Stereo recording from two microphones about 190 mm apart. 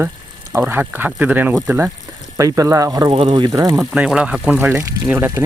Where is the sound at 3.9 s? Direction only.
5° right (ahead or behind).